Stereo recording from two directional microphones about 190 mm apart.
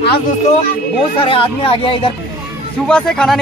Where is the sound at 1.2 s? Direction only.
30° left (ahead or behind).